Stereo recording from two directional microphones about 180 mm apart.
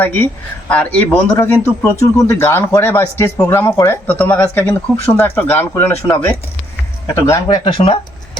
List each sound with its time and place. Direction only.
0.0 s speech: 10° left (ahead or behind)
7.4 s speech: 30° left (ahead or behind)